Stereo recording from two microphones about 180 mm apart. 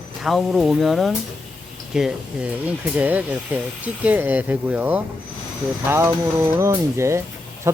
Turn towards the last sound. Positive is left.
turn(degrees=-15)  # may be behind; listen again after turning